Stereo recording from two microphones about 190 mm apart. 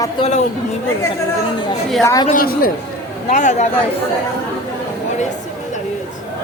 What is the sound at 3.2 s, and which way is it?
Speech, 40° left (ahead or behind).